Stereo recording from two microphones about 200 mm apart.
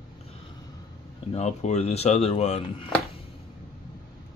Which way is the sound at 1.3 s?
35° left (ahead or behind).